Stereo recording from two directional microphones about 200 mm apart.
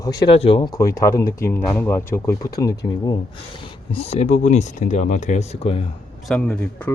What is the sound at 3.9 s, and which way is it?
Speech, 30° left (ahead or behind).